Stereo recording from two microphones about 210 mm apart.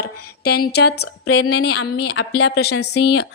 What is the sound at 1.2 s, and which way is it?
A woman's voice, 90° left.